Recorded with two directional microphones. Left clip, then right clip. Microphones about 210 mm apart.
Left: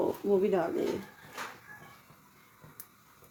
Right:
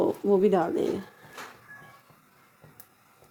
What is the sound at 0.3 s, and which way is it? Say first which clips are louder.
Speech: right 5 dB; 40° right (ahead or behind).